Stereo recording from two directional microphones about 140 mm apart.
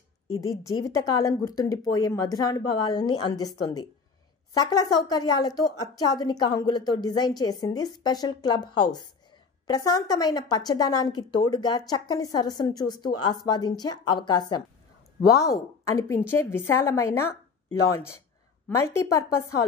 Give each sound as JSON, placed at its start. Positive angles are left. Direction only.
{"t": 0.3, "sound": "a woman's voice", "side_deg": 25}